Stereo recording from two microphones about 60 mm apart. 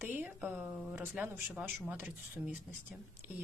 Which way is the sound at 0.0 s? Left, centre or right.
Right.